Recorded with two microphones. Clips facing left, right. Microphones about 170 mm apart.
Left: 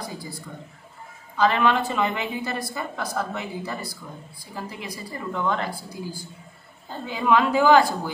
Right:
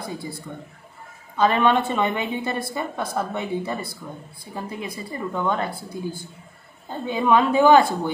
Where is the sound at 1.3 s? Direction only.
25° right (ahead or behind).